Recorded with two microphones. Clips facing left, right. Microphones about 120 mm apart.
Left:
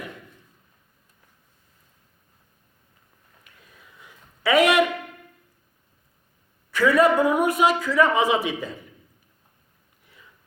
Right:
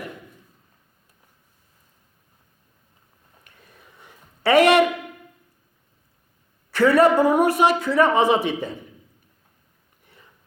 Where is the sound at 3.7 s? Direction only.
45° right (ahead or behind).